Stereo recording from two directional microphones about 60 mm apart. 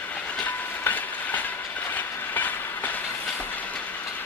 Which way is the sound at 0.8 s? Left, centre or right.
Left.